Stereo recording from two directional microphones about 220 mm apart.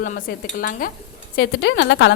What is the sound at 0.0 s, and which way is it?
Dishes, 40° left (ahead or behind).